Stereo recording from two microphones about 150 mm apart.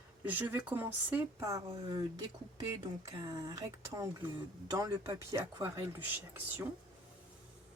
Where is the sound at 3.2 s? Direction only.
25° right (ahead or behind).